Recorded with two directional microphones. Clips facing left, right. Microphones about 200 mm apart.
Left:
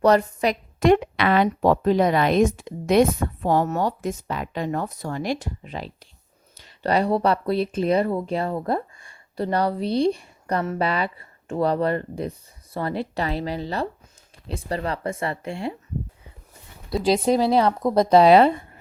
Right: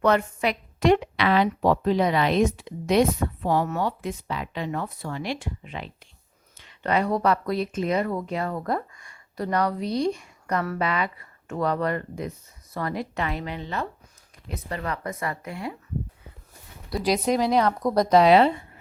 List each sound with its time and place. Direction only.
0.0 s a woman's voice: 35° left (ahead or behind)
17.0 s speech: 30° left (ahead or behind)